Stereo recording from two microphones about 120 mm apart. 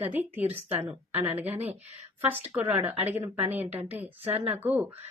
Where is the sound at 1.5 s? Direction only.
60° right (ahead or behind).